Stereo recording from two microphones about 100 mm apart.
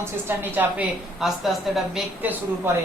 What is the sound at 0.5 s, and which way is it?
Speech, 20° right (ahead or behind).